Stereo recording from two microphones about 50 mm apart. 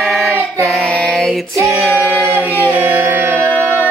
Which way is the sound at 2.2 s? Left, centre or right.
Right.